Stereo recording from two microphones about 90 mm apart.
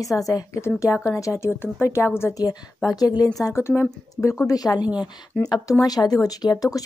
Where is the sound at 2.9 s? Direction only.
45° left (ahead or behind).